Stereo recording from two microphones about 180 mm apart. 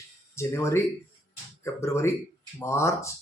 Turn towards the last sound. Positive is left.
turn(degrees=15)  # may be behind; listen again after turning